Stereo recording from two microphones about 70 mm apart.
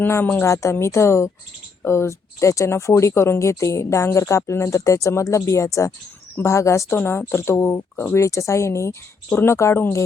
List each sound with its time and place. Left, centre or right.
0.4 s speech: left
6.9 s speech: left
9.3 s speech: left